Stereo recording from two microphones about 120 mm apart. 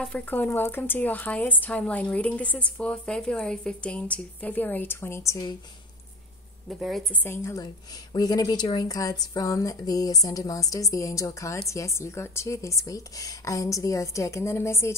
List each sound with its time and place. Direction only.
0.0 s speech: 10° left (ahead or behind); by 5.6 s 30° left (ahead or behind)
6.7 s a woman's voice: centre (ahead or behind)
7.2 s speech: 20° left (ahead or behind)
7.6 s speech: 35° left (ahead or behind)